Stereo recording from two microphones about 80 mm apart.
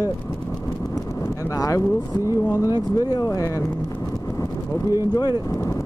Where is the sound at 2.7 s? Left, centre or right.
Left.